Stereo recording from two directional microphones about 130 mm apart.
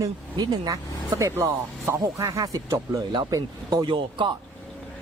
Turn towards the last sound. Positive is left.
turn(degrees=-40)  # may be behind; listen again after turning